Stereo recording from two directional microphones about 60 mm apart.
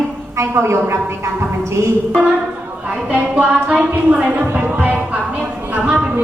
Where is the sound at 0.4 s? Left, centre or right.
Right.